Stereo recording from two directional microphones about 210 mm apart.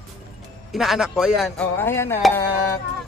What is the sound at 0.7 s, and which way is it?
Speech, centre (ahead or behind).